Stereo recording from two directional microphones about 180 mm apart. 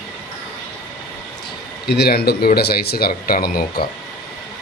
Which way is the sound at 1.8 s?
65° left (ahead or behind).